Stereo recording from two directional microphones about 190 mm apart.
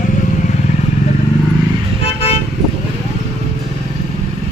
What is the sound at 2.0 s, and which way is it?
Toot, 30° left (ahead or behind).